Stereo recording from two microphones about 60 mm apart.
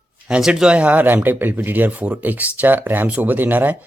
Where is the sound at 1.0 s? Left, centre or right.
Right.